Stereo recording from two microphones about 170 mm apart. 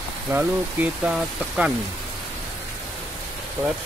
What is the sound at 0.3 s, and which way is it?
Speech, 10° right (ahead or behind).